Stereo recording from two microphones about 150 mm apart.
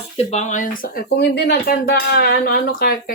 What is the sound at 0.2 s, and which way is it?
Speech, 50° left (ahead or behind).